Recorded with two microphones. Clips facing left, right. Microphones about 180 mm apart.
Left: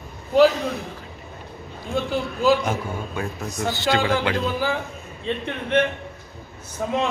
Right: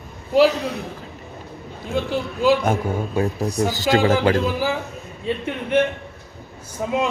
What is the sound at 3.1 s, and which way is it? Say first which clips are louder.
Music: right 7 dB; 35° right (ahead or behind).